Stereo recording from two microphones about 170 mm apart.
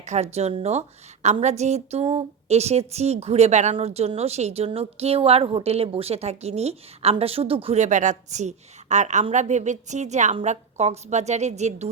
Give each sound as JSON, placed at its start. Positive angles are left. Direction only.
{"t": 0.0, "sound": "a woman's voice", "side_deg": -40}